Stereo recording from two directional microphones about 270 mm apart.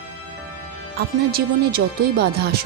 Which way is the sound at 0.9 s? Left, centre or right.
Right.